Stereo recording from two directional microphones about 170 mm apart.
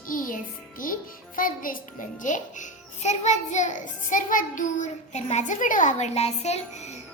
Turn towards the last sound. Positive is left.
turn(degrees=40)  # may be behind; listen again after turning